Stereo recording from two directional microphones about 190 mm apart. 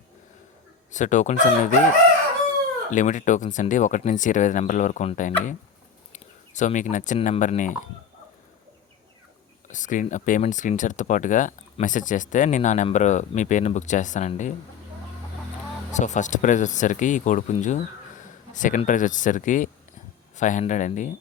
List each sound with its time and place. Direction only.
0.9 s speech: 40° left (ahead or behind)
2.9 s speech: 40° left (ahead or behind)
9.6 s speech: 40° left (ahead or behind)
15.9 s speech: 40° left (ahead or behind)